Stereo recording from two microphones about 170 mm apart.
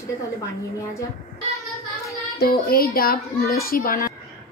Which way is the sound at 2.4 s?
60° left (ahead or behind).